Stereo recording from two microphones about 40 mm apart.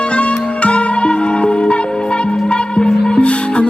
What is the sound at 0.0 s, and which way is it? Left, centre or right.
Music, left.